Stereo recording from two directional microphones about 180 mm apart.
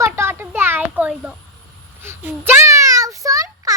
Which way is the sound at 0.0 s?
15° right (ahead or behind).